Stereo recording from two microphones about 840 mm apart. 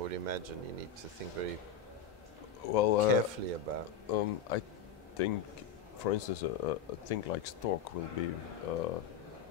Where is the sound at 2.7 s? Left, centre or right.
Left.